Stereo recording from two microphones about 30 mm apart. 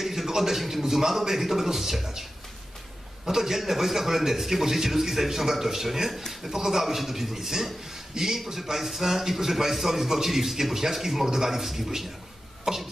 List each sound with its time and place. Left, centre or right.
0.0 s a sound: centre
0.3 s a man's voice: centre
3.3 s a man's voice: centre